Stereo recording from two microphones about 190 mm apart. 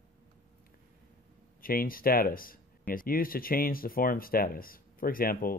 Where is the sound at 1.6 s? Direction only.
50° left (ahead or behind).